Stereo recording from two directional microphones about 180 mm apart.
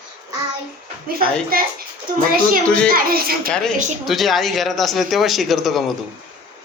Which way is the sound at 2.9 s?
55° right (ahead or behind).